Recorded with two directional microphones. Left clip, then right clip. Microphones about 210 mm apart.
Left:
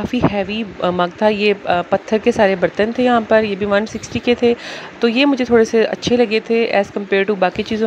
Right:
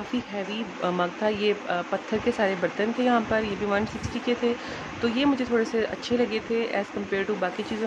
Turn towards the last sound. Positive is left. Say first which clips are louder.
# left 11 dB
turn(degrees=35)  # may be behind; listen again after turning